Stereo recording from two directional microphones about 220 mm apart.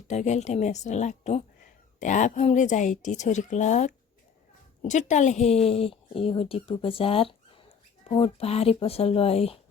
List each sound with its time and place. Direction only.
0.1 s speech: 30° left (ahead or behind)